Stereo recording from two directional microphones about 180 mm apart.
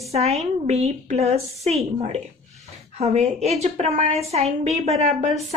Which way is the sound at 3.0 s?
40° right (ahead or behind).